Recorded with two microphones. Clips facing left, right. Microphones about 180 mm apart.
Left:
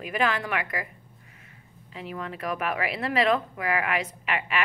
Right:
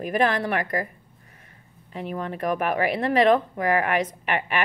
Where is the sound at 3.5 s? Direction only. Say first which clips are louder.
Right 5 dB; 35° right (ahead or behind).